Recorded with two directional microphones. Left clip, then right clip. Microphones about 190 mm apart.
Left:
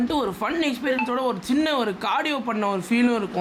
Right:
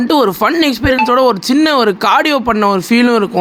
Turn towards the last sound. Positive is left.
turn(degrees=-30)  # may be behind; listen again after turning